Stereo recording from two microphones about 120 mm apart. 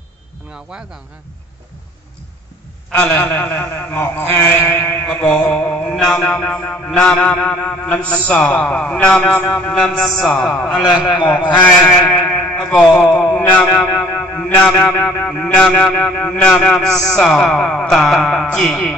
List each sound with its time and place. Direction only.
3.0 s mantra: 15° left (ahead or behind)
11.2 s a man's voice: 15° left (ahead or behind)
15.0 s mantra: 10° left (ahead or behind)